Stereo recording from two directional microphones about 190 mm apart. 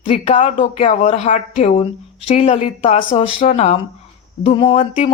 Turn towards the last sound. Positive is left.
turn(degrees=30)  # may be behind; listen again after turning